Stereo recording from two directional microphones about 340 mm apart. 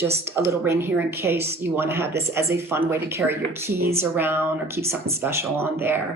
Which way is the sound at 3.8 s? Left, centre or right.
Right.